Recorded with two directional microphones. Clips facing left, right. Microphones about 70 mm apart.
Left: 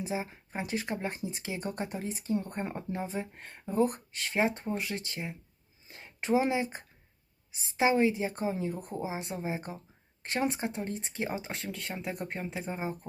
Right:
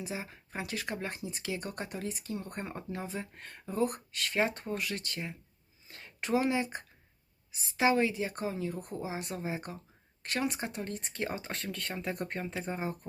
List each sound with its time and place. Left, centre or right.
0.0 s speech: left